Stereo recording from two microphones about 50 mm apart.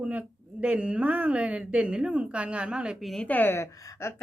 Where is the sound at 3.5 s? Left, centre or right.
Left.